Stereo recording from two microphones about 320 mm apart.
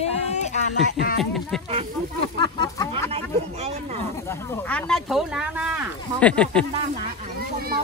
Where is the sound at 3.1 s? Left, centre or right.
Centre.